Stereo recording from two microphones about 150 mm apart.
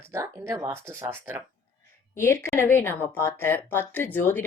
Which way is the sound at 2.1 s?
15° left (ahead or behind).